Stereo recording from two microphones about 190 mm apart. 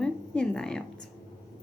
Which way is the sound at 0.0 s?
5° left (ahead or behind).